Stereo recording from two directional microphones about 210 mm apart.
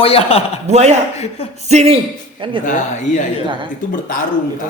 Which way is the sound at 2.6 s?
35° left (ahead or behind).